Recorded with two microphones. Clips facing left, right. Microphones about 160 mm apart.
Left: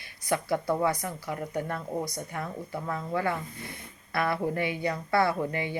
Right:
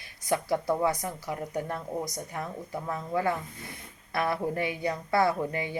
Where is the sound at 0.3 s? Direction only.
20° right (ahead or behind).